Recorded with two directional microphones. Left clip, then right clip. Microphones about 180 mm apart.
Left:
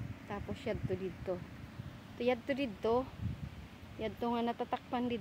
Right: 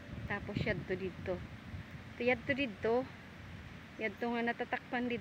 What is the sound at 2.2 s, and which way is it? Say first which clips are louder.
Speech: right 1 dB; 15° left (ahead or behind).